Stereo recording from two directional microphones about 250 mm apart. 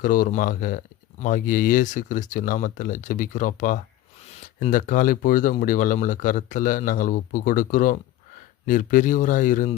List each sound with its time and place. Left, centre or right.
0.0 s speech: left